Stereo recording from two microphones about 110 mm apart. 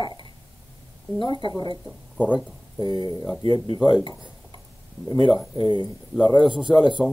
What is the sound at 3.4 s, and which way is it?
Speech, 55° left (ahead or behind).